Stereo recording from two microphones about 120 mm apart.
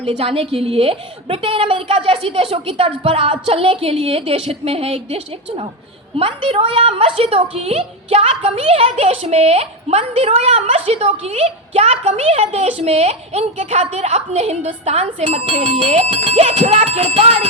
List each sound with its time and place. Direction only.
0.0 s a woman's voice: 50° right (ahead or behind)